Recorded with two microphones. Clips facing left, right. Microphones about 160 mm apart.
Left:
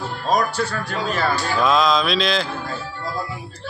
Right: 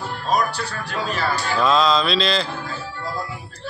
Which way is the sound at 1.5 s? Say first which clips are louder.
Right 1 dB; 5° left (ahead or behind).